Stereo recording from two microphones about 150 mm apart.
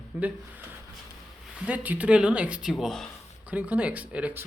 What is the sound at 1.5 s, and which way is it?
Speech, 10° right (ahead or behind).